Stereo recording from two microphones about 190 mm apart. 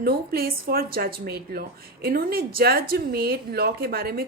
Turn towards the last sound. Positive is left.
turn(degrees=-55)  # may be behind; listen again after turning